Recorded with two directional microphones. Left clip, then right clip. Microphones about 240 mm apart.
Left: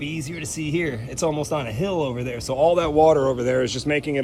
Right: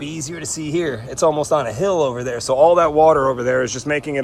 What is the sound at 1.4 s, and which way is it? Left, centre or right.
Speech, right.